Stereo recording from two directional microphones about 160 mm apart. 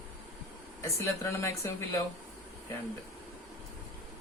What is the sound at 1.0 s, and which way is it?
Speech, 15° left (ahead or behind).